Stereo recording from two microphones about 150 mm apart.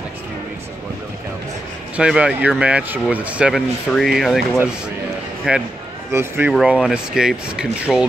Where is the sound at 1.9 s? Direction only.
5° right (ahead or behind).